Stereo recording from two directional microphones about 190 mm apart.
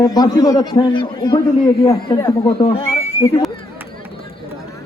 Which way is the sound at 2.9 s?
15° left (ahead or behind).